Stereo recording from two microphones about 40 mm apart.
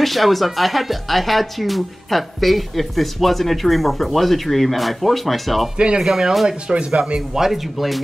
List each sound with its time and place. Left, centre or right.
0.0 s speech: centre
5.8 s speech: right
6.7 s speech: right
7.2 s speech: centre